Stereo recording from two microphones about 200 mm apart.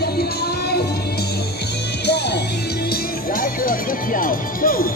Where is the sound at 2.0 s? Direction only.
55° left (ahead or behind).